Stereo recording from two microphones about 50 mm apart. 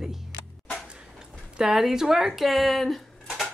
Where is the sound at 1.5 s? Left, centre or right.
Centre.